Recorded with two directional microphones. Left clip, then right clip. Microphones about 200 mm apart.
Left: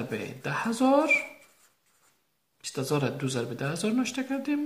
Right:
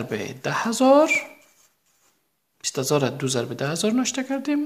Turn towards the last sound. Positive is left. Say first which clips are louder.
# right 5 dB
turn(degrees=-40)  # may be behind; listen again after turning